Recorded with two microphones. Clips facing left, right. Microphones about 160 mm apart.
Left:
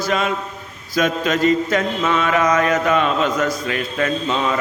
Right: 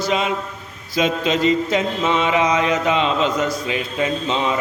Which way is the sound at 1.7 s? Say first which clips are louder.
Even; 25° right (ahead or behind).